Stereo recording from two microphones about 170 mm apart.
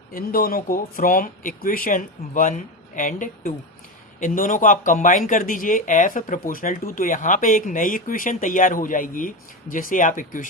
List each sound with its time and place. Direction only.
0.1 s speech: 60° left (ahead or behind)